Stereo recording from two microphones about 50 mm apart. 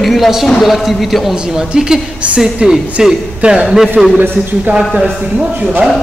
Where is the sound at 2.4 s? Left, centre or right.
Centre.